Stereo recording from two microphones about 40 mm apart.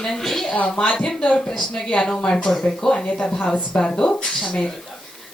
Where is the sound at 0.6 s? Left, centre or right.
Left.